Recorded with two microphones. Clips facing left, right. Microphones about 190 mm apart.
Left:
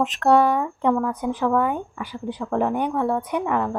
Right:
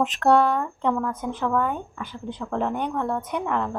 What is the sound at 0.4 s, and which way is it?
Speech, 10° left (ahead or behind).